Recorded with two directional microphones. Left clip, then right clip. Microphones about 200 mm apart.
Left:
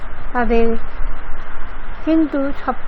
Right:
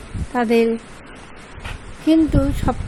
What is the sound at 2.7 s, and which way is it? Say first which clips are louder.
Speech: left 1 dB; 35° right (ahead or behind).